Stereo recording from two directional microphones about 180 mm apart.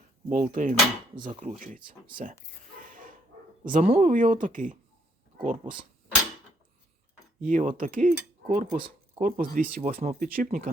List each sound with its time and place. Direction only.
0.3 s speech: 45° right (ahead or behind)
2.8 s dog: 50° right (ahead or behind)
3.6 s speech: 50° right (ahead or behind)
7.4 s speech: 45° right (ahead or behind)